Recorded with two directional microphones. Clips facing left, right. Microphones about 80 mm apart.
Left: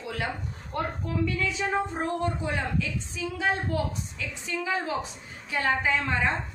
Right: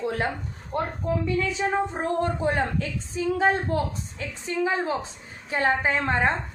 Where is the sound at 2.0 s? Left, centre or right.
Right.